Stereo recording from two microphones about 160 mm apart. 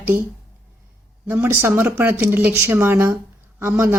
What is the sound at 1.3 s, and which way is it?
Speech, 15° right (ahead or behind).